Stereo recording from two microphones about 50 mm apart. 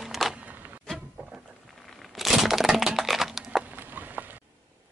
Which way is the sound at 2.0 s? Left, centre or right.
Centre.